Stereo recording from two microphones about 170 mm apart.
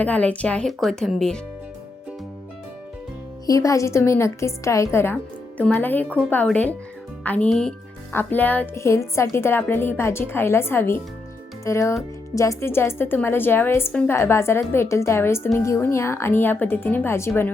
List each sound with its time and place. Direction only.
0.0 s speech: 10° left (ahead or behind)
3.4 s a woman's voice: 20° left (ahead or behind)